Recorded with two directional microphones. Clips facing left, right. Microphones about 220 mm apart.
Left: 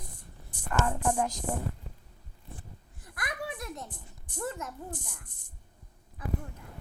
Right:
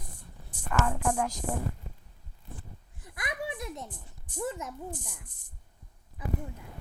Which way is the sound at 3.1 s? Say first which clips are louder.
Right 1 dB; 20° right (ahead or behind).